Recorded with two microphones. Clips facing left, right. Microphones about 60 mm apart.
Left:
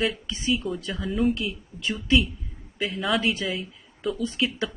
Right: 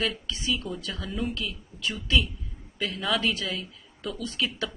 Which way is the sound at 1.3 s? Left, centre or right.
Left.